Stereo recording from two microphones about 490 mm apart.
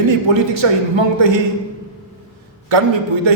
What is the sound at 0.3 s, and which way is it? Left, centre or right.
A man's voice, right.